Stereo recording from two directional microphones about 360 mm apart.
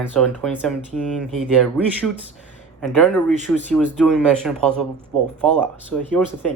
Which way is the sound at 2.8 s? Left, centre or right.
Centre.